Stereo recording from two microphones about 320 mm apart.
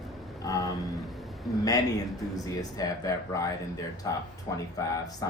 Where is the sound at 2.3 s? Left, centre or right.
Centre.